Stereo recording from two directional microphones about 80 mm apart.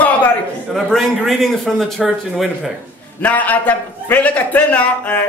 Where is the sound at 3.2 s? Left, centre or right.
Centre.